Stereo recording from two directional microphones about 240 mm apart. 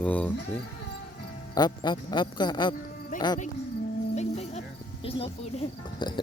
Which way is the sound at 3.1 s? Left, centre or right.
Left.